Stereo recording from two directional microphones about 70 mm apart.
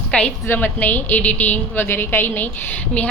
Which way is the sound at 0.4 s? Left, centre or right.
Left.